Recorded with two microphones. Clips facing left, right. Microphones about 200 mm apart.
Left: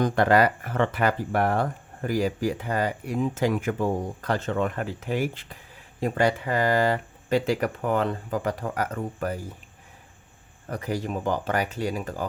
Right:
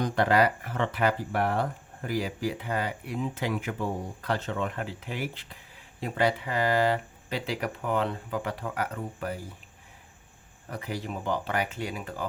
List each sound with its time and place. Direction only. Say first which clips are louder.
0.0 s speech: left 4 dB; 50° left (ahead or behind)
10.7 s speech: left 5 dB; 45° left (ahead or behind)